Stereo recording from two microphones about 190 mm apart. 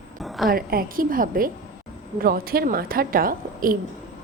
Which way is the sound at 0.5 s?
50° right (ahead or behind).